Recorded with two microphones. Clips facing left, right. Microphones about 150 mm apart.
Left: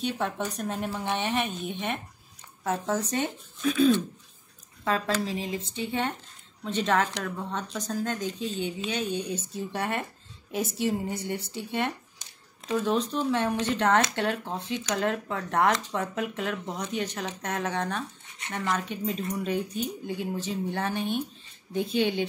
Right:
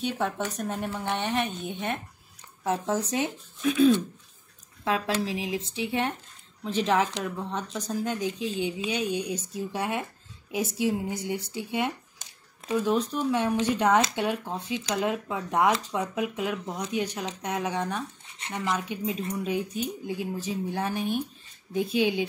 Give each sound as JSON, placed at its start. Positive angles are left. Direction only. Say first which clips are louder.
{"t": 0.6, "sound": "speech", "louder": "even", "side_deg": 0}